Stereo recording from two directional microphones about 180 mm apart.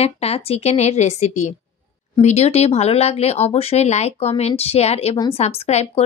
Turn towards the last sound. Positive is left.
turn(degrees=35)  # may be behind; listen again after turning